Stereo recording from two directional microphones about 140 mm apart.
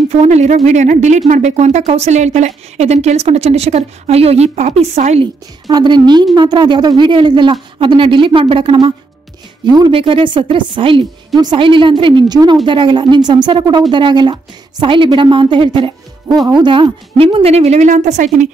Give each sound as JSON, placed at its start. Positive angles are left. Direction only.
{"t": 0.1, "sound": "speech", "side_deg": -50}
{"t": 5.2, "sound": "speech", "side_deg": -30}